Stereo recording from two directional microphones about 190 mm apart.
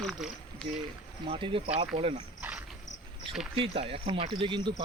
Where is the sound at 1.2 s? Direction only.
25° right (ahead or behind).